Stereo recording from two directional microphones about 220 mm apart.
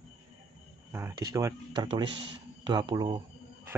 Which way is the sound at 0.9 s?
15° right (ahead or behind).